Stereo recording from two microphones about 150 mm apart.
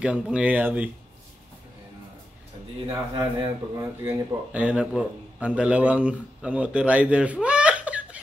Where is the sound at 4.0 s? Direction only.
15° right (ahead or behind).